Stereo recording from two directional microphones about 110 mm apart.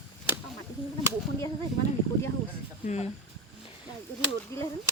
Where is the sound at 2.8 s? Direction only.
90° left.